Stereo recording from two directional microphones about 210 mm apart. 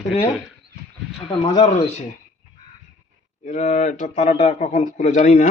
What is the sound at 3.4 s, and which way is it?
A man's voice, 35° left (ahead or behind).